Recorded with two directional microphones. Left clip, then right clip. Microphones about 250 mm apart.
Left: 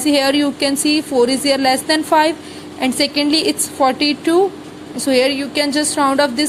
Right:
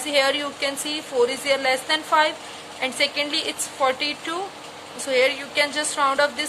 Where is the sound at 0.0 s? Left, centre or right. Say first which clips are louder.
Left 6 dB; centre.